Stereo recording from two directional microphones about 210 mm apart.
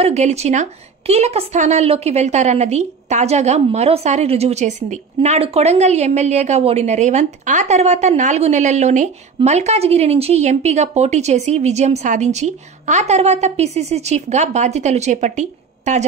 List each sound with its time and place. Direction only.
0.0 s a woman's voice: 30° right (ahead or behind)